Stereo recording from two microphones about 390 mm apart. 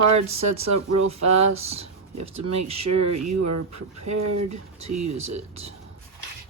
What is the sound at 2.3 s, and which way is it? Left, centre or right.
Speech, right.